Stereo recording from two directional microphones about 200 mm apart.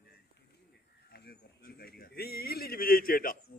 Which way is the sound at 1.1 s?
50° left (ahead or behind).